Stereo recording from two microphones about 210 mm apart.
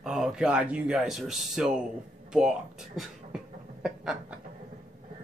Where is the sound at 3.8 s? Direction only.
5° right (ahead or behind).